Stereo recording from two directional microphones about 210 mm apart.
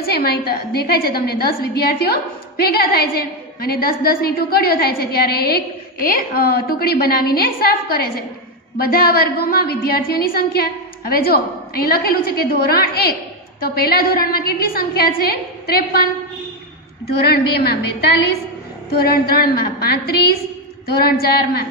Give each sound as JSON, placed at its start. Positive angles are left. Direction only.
{"t": 0.0, "sound": "a woman's voice", "side_deg": 50}
{"t": 17.2, "sound": "a woman's voice", "side_deg": 50}